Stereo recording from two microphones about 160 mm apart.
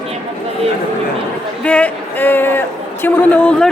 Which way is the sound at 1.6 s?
10° left (ahead or behind).